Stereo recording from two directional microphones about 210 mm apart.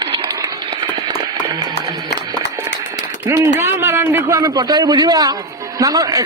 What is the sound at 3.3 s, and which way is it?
A man's voice, 15° right (ahead or behind).